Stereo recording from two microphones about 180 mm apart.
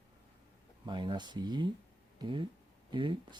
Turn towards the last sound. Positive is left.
turn(degrees=-25)  # may be behind; listen again after turning